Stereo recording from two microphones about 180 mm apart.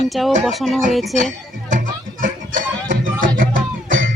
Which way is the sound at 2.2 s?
50° right (ahead or behind).